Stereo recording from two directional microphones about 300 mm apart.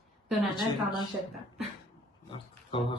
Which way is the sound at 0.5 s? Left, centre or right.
Centre.